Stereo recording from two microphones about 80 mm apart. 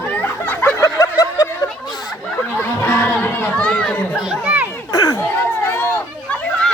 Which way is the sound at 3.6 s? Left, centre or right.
Centre.